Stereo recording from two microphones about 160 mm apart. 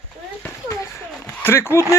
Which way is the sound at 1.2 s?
15° left (ahead or behind).